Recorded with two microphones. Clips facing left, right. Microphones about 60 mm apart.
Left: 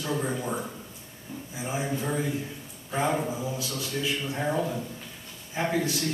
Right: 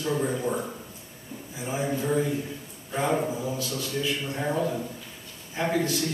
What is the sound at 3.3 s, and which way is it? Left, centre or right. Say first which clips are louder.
Speech: right 2 dB; centre.